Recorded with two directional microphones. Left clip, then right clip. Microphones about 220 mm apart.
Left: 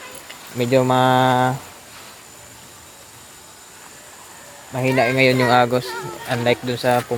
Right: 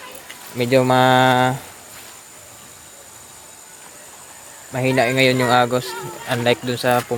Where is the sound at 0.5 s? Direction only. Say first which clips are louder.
Right 1 dB; 5° right (ahead or behind).